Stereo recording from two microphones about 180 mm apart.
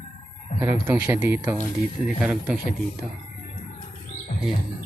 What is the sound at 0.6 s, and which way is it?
Speech, 10° right (ahead or behind).